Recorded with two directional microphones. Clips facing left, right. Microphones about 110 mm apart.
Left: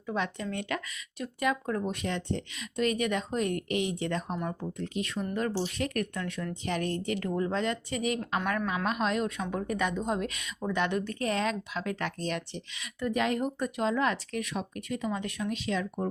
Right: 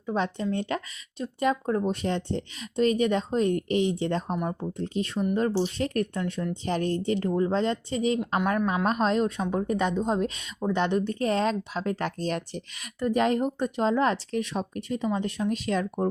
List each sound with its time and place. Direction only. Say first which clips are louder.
0.0 s a woman's voice: right 5 dB; 30° right (ahead or behind)